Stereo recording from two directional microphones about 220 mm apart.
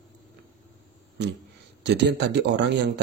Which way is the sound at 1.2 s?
50° right (ahead or behind).